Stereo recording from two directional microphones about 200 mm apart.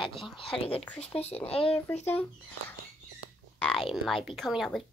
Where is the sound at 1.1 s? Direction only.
30° left (ahead or behind).